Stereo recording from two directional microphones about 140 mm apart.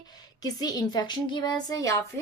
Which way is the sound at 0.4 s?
25° left (ahead or behind).